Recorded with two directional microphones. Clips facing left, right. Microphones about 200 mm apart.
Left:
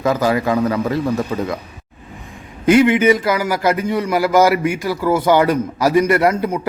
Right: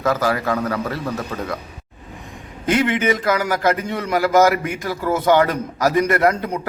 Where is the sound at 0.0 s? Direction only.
15° left (ahead or behind).